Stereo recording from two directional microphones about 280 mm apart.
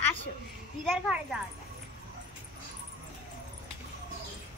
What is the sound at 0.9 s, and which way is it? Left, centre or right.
Speech, centre.